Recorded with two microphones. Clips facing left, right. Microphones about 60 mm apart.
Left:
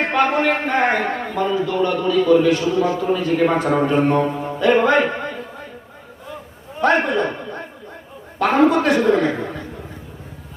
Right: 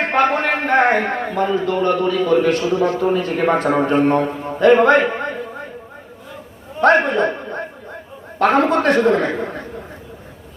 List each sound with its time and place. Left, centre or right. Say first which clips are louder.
0.1 s a man's voice: right 1 dB; right
6.8 s a man's voice: right 3 dB; right